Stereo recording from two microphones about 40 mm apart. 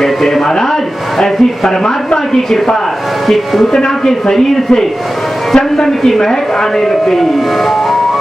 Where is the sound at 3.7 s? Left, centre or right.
Centre.